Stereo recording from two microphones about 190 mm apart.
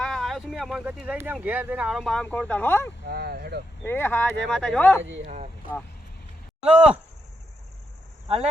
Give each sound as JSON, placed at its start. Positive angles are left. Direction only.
{"t": 0.0, "sound": "speech", "side_deg": 0}
{"t": 3.1, "sound": "speech", "side_deg": -55}
{"t": 3.8, "sound": "speech", "side_deg": 10}
{"t": 5.2, "sound": "speech", "side_deg": -35}
{"t": 6.7, "sound": "speech", "side_deg": -5}